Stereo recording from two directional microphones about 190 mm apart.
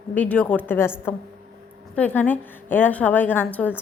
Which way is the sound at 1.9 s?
10° left (ahead or behind).